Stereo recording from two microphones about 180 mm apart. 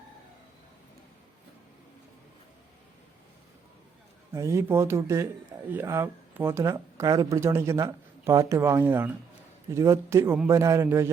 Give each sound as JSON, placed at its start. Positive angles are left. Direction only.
{"t": 4.3, "sound": "speech", "side_deg": -15}